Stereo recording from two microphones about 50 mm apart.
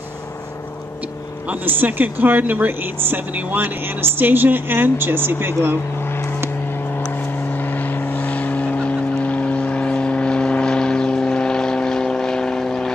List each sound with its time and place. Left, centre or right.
1.5 s speech: right
7.5 s vehicle: left; by 12.9 s centre